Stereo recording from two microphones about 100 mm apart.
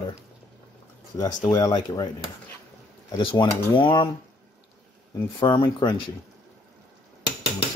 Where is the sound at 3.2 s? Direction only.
60° left (ahead or behind).